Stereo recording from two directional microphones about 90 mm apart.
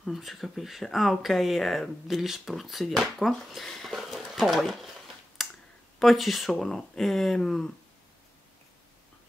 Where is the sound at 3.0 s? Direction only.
Centre (ahead or behind).